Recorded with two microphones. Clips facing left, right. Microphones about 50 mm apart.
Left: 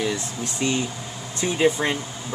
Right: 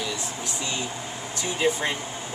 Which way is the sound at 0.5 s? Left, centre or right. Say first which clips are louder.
Left 8 dB; left.